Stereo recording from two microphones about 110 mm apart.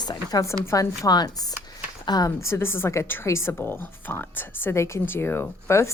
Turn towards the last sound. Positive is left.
turn(degrees=25)  # may be behind; listen again after turning